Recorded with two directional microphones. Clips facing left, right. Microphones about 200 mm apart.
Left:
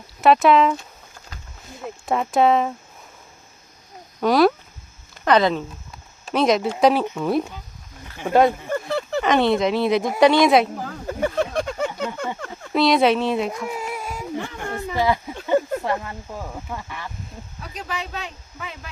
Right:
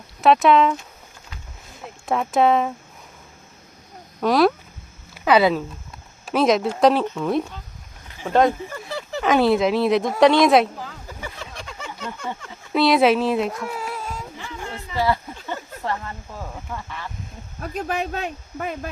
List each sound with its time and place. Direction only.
0.2 s speech: centre (ahead or behind)
2.0 s speech: centre (ahead or behind)
4.2 s speech: centre (ahead or behind)
8.9 s a sound: 60° left (ahead or behind)
9.2 s speech: 5° right (ahead or behind)
10.8 s a sound: 50° left (ahead or behind)
12.7 s speech: centre (ahead or behind)
13.7 s whimper: 15° left (ahead or behind)
14.3 s a sound: 55° left (ahead or behind)
14.9 s speech: 15° left (ahead or behind)
15.4 s a sound: 15° left (ahead or behind)
16.7 s speech: 15° left (ahead or behind)
17.6 s speech: 50° right (ahead or behind)